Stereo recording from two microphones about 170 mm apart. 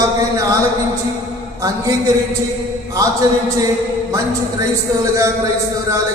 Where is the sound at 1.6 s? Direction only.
20° right (ahead or behind).